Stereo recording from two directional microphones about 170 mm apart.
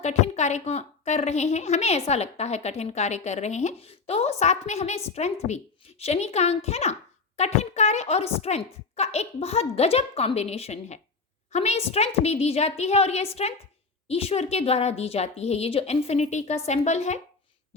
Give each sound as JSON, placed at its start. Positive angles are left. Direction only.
{"t": 0.0, "sound": "a woman's voice", "side_deg": 40}